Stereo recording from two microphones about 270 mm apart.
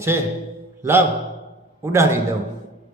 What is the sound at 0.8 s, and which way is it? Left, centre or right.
A man's voice, centre.